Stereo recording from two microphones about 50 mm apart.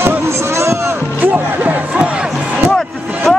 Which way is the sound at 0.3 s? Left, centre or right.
Right.